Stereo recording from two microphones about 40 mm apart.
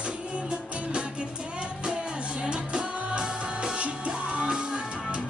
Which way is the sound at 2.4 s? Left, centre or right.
Right.